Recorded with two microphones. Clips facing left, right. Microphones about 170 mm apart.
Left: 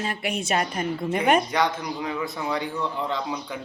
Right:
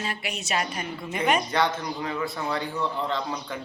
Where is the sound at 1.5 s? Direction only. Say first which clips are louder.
Left 1 dB; 15° left (ahead or behind).